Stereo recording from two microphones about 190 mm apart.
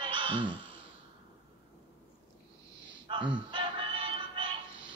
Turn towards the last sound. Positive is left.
turn(degrees=-25)  # may be behind; listen again after turning